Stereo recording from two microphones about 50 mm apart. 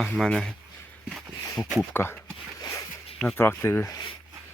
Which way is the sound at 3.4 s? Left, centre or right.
Left.